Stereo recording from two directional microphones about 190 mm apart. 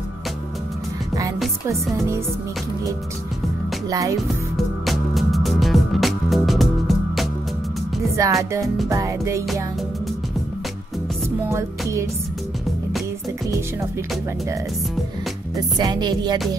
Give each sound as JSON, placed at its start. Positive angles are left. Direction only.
{"t": 1.7, "sound": "music", "side_deg": -15}
{"t": 3.9, "sound": "music", "side_deg": -20}
{"t": 4.8, "sound": "music", "side_deg": 0}
{"t": 8.0, "sound": "music", "side_deg": -15}
{"t": 11.2, "sound": "music", "side_deg": -15}
{"t": 15.5, "sound": "music", "side_deg": -20}